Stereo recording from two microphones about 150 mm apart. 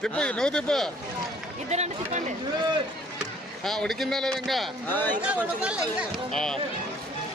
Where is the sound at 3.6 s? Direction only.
Centre (ahead or behind).